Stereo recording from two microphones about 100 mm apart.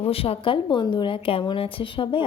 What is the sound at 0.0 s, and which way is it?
A woman's voice, 75° left (ahead or behind).